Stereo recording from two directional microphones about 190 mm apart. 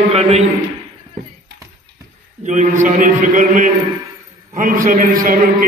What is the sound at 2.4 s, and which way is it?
A man's voice, 40° right (ahead or behind).